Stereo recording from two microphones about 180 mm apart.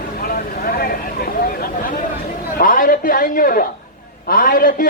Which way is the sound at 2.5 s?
50° left (ahead or behind).